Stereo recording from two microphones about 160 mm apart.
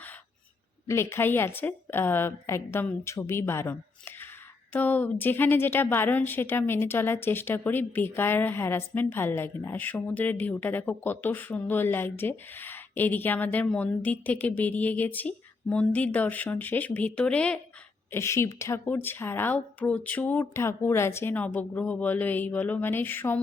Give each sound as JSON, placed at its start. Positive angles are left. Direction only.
{"t": 0.9, "sound": "a woman's voice", "side_deg": 15}